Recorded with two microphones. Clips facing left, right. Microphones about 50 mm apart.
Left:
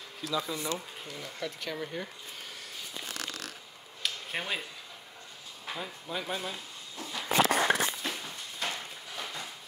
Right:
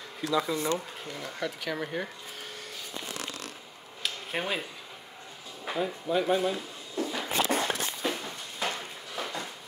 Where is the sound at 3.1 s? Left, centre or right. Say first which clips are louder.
Right 1 dB; right.